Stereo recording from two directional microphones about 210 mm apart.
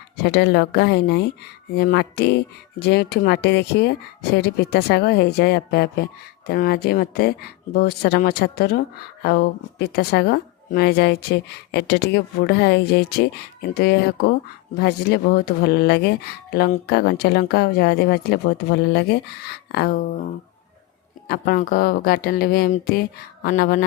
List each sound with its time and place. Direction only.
0.3 s speech: 50° left (ahead or behind)
21.2 s speech: 45° left (ahead or behind)